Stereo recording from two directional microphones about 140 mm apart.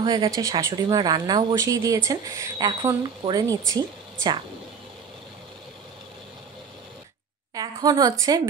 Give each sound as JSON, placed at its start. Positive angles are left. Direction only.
{"t": 0.0, "sound": "speech", "side_deg": -25}
{"t": 7.5, "sound": "a woman's voice", "side_deg": -30}